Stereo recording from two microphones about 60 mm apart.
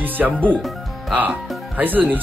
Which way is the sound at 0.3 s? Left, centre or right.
Centre.